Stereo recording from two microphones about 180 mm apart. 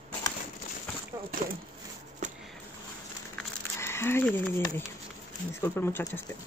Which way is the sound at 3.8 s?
15° left (ahead or behind).